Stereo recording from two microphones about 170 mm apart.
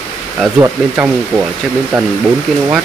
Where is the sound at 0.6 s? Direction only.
10° right (ahead or behind).